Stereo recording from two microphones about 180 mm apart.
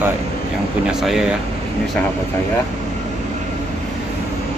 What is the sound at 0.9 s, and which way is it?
Speech, centre (ahead or behind).